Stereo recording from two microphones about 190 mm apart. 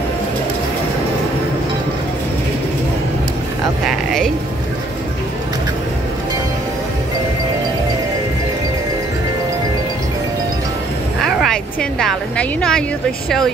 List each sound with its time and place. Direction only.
11.1 s music: centre (ahead or behind)